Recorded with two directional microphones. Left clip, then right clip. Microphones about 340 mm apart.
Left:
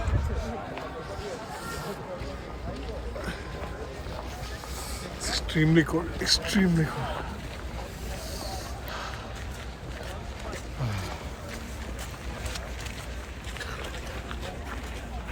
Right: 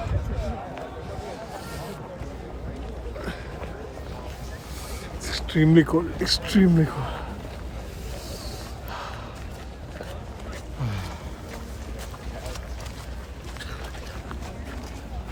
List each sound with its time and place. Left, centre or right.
5.2 s speech: centre